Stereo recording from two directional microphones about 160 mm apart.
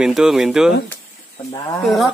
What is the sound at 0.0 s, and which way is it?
Speech, 5° right (ahead or behind).